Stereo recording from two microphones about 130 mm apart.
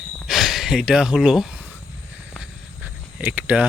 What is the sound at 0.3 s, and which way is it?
Speech, centre (ahead or behind).